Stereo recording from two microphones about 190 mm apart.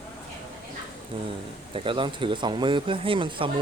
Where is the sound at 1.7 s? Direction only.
25° right (ahead or behind).